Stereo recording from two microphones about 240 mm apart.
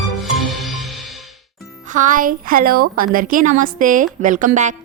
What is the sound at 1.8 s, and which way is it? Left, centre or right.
A woman's voice, right.